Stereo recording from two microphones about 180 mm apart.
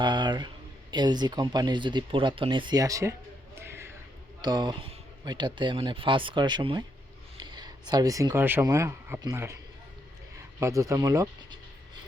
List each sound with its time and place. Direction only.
0.0 s speech: 25° right (ahead or behind)
3.7 s a sound: 15° right (ahead or behind)
4.4 s speech: 20° right (ahead or behind)
10.6 s speech: 15° right (ahead or behind)